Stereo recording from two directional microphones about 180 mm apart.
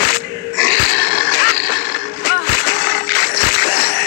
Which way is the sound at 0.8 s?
60° left (ahead or behind).